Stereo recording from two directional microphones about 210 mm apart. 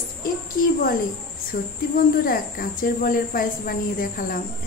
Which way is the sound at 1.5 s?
50° left (ahead or behind).